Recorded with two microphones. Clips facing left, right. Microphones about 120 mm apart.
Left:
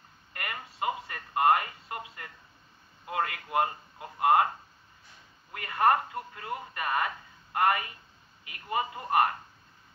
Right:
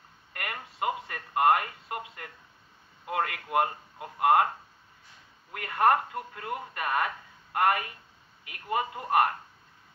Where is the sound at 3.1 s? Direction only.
60° right (ahead or behind).